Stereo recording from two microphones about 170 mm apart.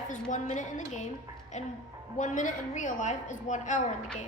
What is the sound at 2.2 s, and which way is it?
A woman's voice, 45° left (ahead or behind).